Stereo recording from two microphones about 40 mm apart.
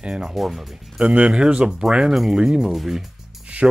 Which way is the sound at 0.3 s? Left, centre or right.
Centre.